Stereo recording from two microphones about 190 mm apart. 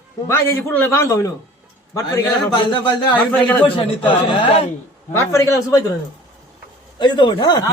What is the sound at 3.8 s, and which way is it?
Speech, 25° left (ahead or behind).